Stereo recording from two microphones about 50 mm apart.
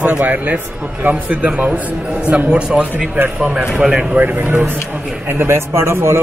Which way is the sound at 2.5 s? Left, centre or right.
Centre.